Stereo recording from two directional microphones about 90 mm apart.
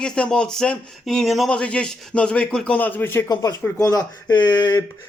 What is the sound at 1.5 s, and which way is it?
A man's voice, 10° left (ahead or behind).